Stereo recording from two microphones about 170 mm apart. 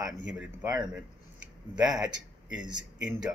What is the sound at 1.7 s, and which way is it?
Speech, 5° right (ahead or behind).